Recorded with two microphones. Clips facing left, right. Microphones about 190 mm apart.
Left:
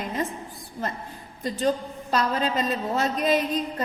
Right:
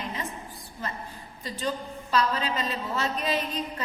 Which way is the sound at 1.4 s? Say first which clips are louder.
Left 7 dB; 45° left (ahead or behind).